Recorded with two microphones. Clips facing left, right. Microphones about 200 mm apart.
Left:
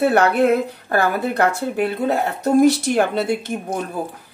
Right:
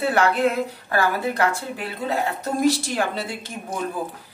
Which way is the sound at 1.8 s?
65° left (ahead or behind).